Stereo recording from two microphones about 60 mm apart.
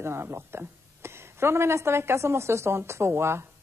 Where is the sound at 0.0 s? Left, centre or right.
Right.